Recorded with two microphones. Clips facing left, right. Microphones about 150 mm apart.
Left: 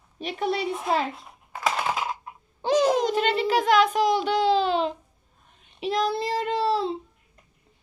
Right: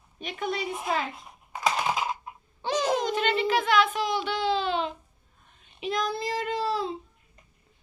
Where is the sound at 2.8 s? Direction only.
40° left (ahead or behind).